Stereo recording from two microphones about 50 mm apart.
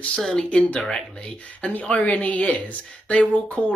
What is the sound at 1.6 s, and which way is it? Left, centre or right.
Speech, left.